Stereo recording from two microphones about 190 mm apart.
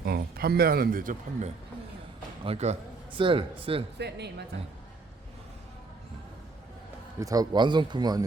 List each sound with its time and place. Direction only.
0.0 s a man's voice: 55° right (ahead or behind); by 3.8 s 30° right (ahead or behind)
3.9 s speech: 60° right (ahead or behind)
7.2 s a man's voice: 20° right (ahead or behind)